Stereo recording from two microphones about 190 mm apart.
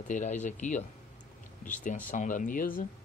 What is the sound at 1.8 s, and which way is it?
Speech, 45° left (ahead or behind).